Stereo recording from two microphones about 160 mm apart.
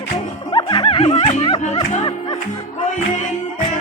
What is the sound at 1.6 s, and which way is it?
Music, 45° left (ahead or behind).